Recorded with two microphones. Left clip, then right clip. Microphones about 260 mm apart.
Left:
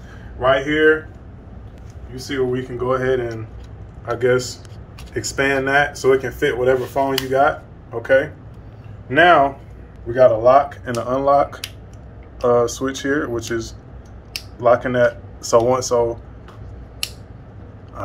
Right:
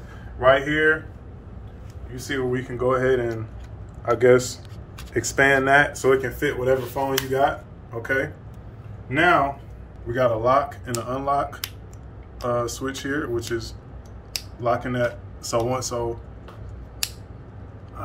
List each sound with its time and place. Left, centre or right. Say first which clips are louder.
0.4 s speech: left 2 dB; centre
2.2 s speech: left 4 dB; centre
6.1 s speech: left 4 dB; centre
11.1 s speech: left 8 dB; left